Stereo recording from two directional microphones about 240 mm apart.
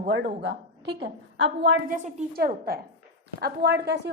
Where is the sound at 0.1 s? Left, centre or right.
Right.